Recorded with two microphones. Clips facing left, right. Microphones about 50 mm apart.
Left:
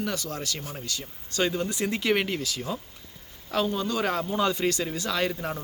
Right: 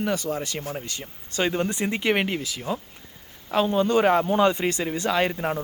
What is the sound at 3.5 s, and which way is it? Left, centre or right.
Speech, right.